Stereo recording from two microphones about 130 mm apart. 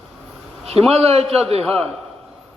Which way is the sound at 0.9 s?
50° right (ahead or behind).